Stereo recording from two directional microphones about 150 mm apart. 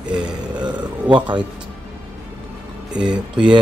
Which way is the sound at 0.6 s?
30° right (ahead or behind).